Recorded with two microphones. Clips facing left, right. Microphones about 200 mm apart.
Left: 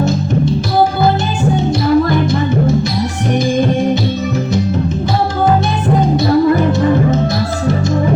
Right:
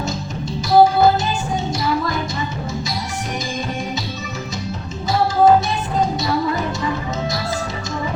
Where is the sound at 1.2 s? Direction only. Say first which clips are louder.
Left 7 dB; 55° left (ahead or behind).